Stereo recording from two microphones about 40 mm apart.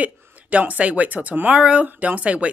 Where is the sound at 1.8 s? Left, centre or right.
Right.